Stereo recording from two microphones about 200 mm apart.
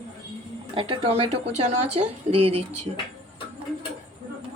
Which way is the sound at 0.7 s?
25° right (ahead or behind).